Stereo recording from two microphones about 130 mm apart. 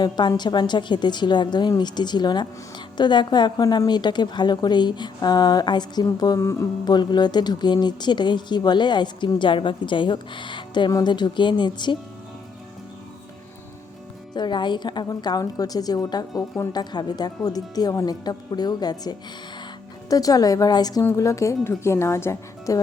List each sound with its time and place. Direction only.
0.0 s a woman's voice: 35° left (ahead or behind)
14.3 s a woman's voice: 35° left (ahead or behind)